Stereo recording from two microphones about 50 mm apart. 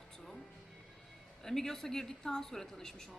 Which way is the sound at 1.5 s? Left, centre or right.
Centre.